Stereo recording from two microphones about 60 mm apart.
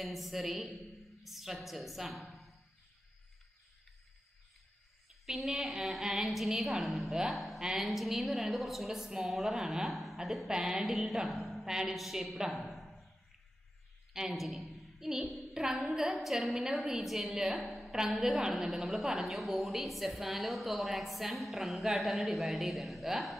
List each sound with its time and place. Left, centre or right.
0.0 s a woman's voice: centre
5.2 s a woman's voice: centre
14.1 s a woman's voice: centre